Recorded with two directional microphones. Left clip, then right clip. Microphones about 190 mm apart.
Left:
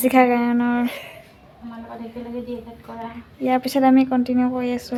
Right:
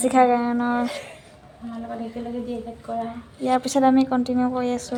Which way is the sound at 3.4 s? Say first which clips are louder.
Left 1 dB; 15° left (ahead or behind).